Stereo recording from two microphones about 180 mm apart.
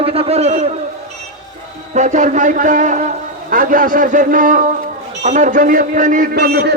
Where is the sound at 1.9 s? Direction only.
45° right (ahead or behind).